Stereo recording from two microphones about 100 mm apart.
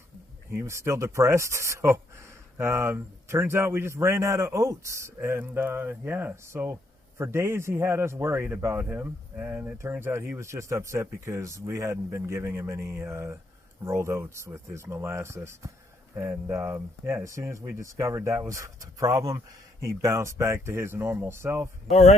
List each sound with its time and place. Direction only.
0.5 s a man's voice: 25° right (ahead or behind)